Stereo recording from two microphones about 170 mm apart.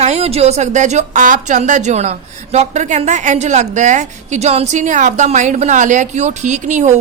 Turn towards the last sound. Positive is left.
turn(degrees=-40)  # may be behind; listen again after turning